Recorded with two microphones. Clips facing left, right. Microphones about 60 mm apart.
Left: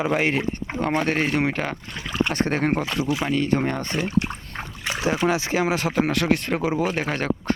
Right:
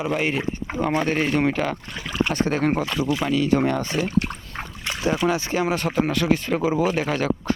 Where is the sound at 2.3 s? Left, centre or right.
Left.